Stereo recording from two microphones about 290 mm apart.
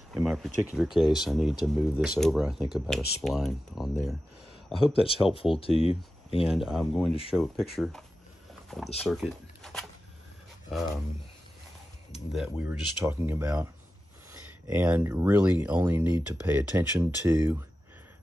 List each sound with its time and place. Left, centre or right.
0.1 s speech: centre
4.9 s speech: centre
6.4 s speech: centre
12.3 s speech: centre